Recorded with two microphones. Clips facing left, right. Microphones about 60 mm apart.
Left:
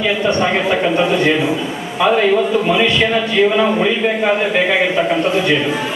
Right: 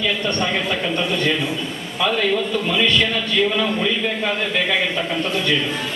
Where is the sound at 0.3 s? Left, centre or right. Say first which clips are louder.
Left 6 dB; centre.